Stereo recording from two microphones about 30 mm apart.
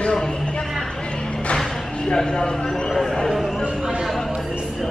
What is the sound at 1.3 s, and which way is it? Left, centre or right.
Music, left.